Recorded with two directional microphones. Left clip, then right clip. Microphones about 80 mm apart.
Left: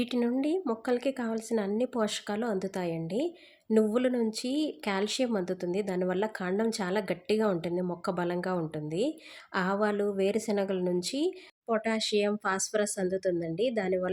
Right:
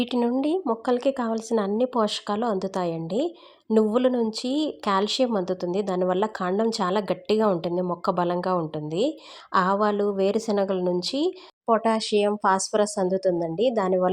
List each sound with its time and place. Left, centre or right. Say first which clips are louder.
0.0 s a woman's voice: right 5 dB; centre